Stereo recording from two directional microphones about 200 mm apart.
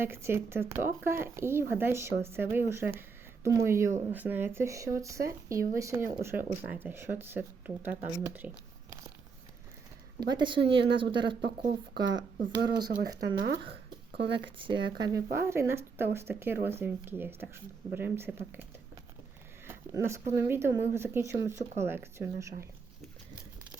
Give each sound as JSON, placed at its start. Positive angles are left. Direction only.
{"t": 0.0, "sound": "speech", "side_deg": -10}
{"t": 10.2, "sound": "speech", "side_deg": -20}
{"t": 12.5, "sound": "speech", "side_deg": -20}
{"t": 13.4, "sound": "speech", "side_deg": -60}
{"t": 14.7, "sound": "speech", "side_deg": -20}
{"t": 19.6, "sound": "speech", "side_deg": -15}